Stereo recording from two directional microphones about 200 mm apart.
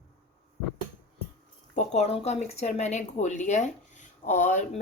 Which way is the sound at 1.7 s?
35° left (ahead or behind).